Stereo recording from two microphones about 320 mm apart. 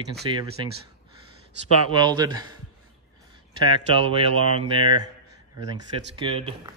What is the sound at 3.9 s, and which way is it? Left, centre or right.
Speech, centre.